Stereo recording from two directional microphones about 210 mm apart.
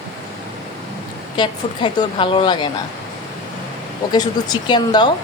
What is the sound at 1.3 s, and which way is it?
A woman's voice, 20° left (ahead or behind).